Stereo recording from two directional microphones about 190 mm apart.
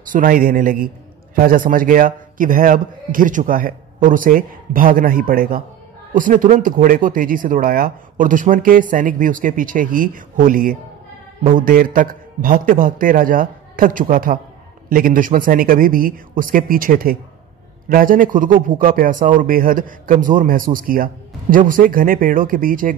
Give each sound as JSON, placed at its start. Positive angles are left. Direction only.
{"t": 0.1, "sound": "a man's voice", "side_deg": -50}